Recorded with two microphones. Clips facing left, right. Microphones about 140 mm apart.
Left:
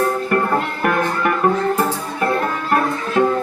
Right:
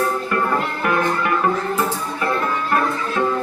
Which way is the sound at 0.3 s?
55° left (ahead or behind).